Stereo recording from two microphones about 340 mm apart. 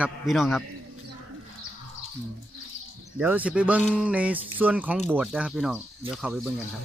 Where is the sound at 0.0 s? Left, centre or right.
Centre.